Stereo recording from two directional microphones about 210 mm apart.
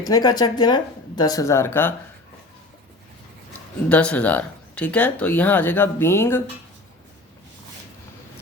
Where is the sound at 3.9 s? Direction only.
5° left (ahead or behind).